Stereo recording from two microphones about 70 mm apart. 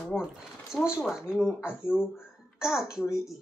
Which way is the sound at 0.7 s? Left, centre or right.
Centre.